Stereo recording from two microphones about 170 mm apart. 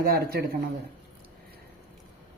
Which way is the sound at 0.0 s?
65° right (ahead or behind).